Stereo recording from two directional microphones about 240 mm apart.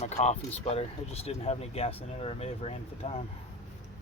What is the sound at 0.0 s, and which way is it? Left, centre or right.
Speech, left.